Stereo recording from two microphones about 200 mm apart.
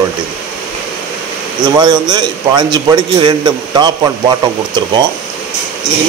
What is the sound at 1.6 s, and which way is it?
A man's voice, 20° right (ahead or behind).